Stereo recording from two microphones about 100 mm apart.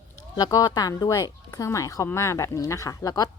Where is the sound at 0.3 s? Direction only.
40° left (ahead or behind).